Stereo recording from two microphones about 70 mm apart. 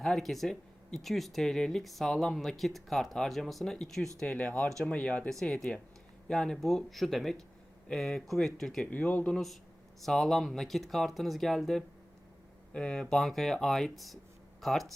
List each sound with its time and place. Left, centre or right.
0.0 s speech: centre
5.3 s speech: centre
8.8 s speech: left
9.3 s speech: centre